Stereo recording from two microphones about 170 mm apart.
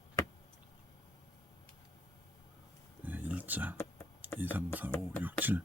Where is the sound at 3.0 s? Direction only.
10° right (ahead or behind).